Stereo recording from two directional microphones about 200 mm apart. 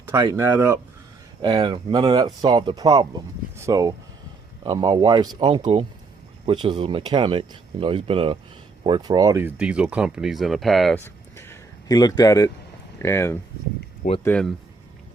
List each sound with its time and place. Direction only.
0.1 s speech: 15° right (ahead or behind); by 11.0 s centre (ahead or behind)
11.0 s a sound: 10° left (ahead or behind)
13.0 s speech: 15° left (ahead or behind)